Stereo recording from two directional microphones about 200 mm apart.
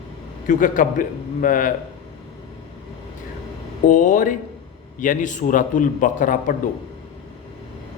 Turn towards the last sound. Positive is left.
turn(degrees=40)  # may be behind; listen again after turning